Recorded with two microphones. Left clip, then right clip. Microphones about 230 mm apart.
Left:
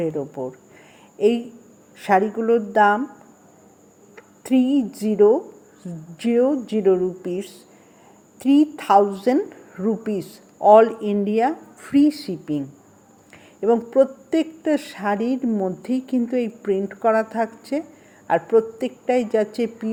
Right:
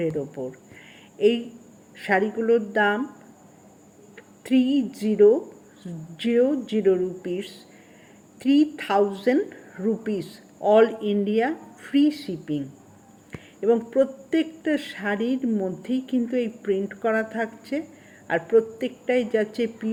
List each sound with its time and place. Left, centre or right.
0.0 s a woman's voice: left
2.4 s a woman's voice: left
4.4 s a woman's voice: left
15.9 s speech: centre
16.2 s a woman's voice: centre